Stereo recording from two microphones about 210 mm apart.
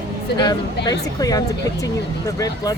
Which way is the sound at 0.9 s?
15° left (ahead or behind).